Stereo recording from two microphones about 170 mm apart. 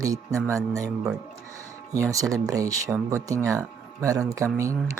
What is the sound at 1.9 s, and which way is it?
Speech, 20° right (ahead or behind).